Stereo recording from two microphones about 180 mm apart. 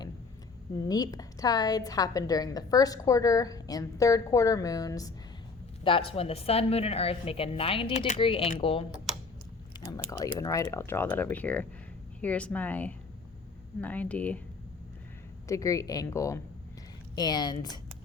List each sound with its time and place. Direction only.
0.8 s a woman's voice: 20° left (ahead or behind)
5.8 s a woman's voice: 30° left (ahead or behind)
9.7 s biting: 25° left (ahead or behind)
10.3 s speech: 20° left (ahead or behind)
15.4 s a woman's voice: 15° left (ahead or behind)